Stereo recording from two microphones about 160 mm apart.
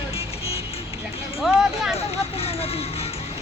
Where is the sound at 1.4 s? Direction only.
Centre (ahead or behind).